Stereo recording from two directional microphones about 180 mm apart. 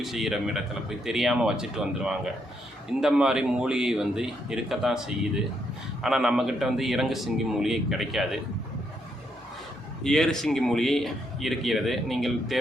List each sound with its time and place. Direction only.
0.0 s speech: centre (ahead or behind)
10.0 s speech: 5° left (ahead or behind)